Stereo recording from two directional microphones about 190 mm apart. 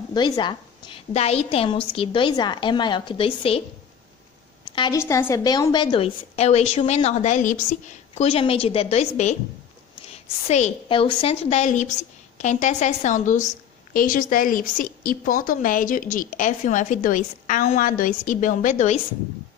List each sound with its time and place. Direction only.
0.1 s a woman's voice: 20° left (ahead or behind)
4.9 s a woman's voice: 15° left (ahead or behind); by 9.4 s 35° left (ahead or behind)
10.5 s a woman's voice: 30° left (ahead or behind)